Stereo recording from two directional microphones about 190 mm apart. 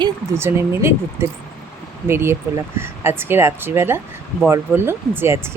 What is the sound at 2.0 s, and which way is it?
Speech, 10° right (ahead or behind).